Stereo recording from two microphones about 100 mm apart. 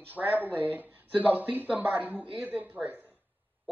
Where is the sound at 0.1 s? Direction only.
15° right (ahead or behind).